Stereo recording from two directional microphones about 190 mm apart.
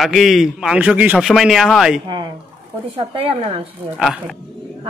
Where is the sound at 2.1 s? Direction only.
25° right (ahead or behind).